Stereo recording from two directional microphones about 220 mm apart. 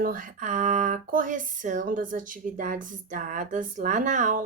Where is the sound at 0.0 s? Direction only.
40° right (ahead or behind).